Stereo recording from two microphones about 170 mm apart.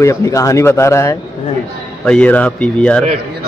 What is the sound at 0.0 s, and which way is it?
A man's voice, 15° left (ahead or behind).